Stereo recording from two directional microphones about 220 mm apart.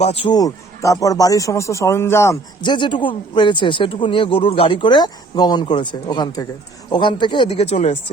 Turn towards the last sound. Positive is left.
turn(degrees=30)  # may be behind; listen again after turning